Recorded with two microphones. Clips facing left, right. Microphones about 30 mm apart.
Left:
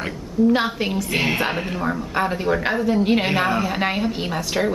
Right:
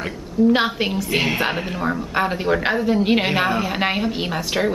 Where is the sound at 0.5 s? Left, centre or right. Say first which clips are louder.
Right 2 dB; right.